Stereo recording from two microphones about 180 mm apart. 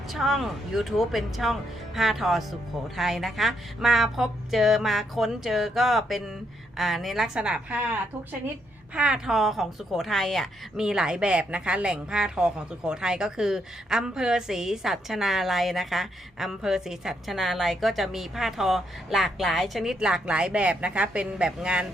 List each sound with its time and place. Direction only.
0.1 s a woman's voice: centre (ahead or behind)
9.0 s a woman's voice: 5° right (ahead or behind)